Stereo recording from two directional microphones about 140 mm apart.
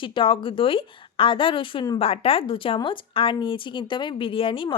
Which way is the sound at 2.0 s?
45° left (ahead or behind).